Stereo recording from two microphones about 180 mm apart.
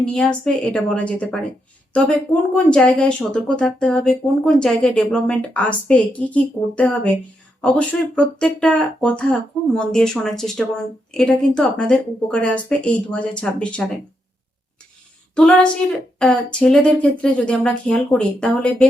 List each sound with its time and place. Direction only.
0.0 s speech: 5° left (ahead or behind)
15.4 s speech: 5° left (ahead or behind)